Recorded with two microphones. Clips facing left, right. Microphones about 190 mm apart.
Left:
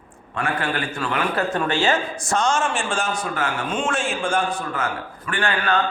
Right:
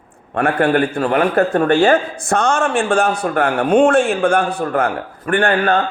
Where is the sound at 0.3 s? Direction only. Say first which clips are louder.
Right 10 dB; 60° right (ahead or behind).